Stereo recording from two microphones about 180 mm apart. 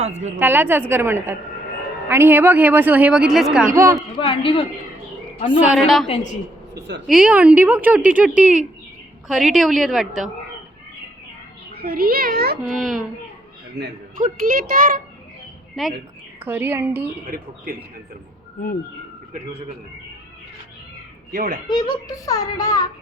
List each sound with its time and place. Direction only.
0.0 s a woman's voice: 40° right (ahead or behind)
0.3 s speech: 10° right (ahead or behind)
4.3 s speech: 30° left (ahead or behind)
5.5 s a woman's voice: 5° right (ahead or behind)
7.1 s a woman's voice: 5° right (ahead or behind)
11.7 s a child's voice: 55° right (ahead or behind)
12.7 s a woman's voice: centre (ahead or behind)
13.8 s a man's voice: 70° right (ahead or behind)
14.2 s a child's voice: 50° right (ahead or behind)
15.8 s a woman's voice: centre (ahead or behind)
16.4 s speech: 10° right (ahead or behind)
17.3 s a child's voice: 50° right (ahead or behind)
21.3 s a child's voice: 50° right (ahead or behind)
21.7 s speech: 25° left (ahead or behind)